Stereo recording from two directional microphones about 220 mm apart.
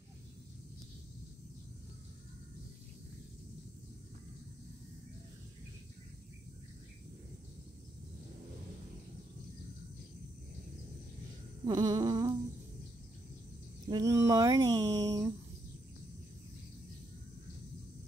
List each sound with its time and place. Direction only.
11.6 s humming: 15° right (ahead or behind)
13.8 s speech: 15° right (ahead or behind)